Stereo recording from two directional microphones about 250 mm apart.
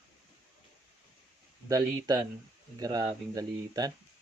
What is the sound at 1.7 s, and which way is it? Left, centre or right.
Speech, centre.